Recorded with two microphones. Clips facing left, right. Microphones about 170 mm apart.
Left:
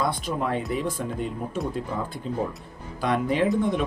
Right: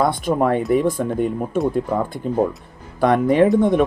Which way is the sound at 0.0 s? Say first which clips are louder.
Right 8 dB; 55° right (ahead or behind).